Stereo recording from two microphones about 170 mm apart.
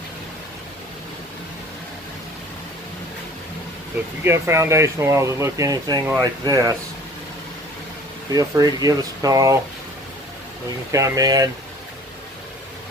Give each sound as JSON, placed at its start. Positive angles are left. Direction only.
{"t": 4.2, "sound": "speech", "side_deg": -15}
{"t": 8.3, "sound": "speech", "side_deg": -20}
{"t": 10.9, "sound": "speech", "side_deg": -20}